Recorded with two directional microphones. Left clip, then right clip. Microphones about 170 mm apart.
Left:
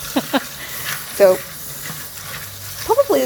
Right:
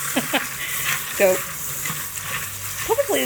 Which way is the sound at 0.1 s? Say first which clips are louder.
Left 3 dB; 15° left (ahead or behind).